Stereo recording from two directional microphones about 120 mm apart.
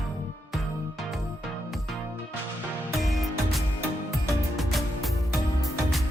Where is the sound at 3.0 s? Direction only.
Centre (ahead or behind).